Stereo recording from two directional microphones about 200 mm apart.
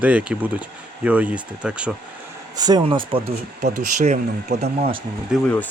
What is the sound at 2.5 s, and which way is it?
Speech, 20° right (ahead or behind).